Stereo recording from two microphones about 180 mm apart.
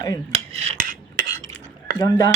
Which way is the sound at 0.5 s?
35° right (ahead or behind).